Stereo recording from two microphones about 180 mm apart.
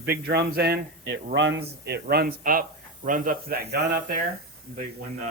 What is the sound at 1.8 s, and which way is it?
Speech, 65° right (ahead or behind).